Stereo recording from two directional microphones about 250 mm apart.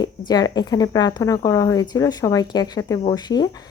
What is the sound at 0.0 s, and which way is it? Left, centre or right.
A woman's voice, centre.